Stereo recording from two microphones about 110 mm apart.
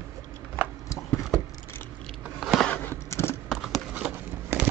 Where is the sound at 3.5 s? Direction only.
Centre (ahead or behind).